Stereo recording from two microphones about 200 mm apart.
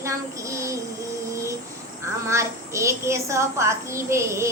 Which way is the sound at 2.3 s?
15° right (ahead or behind).